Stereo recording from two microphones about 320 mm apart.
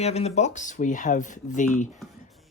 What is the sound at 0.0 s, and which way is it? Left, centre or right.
Speech, centre.